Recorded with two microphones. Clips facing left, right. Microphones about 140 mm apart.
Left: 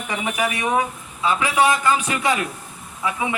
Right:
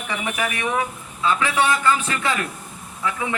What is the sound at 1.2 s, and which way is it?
A man's voice, 15° left (ahead or behind).